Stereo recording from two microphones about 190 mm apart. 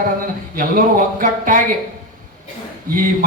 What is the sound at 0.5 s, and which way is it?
Speech, 45° right (ahead or behind).